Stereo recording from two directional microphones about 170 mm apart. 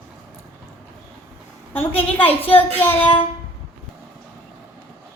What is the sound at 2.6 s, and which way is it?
Child singing, 10° left (ahead or behind).